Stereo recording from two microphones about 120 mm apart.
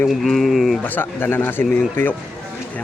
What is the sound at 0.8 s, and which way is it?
Speech, 15° left (ahead or behind).